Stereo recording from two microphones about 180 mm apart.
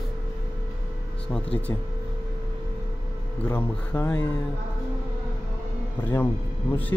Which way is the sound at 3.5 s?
15° left (ahead or behind).